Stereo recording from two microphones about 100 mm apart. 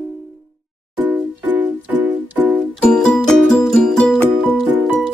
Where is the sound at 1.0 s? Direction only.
15° right (ahead or behind).